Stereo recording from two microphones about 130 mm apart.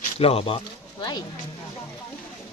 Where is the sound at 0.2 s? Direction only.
50° left (ahead or behind).